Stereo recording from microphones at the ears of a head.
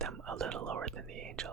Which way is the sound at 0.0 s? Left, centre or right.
Right.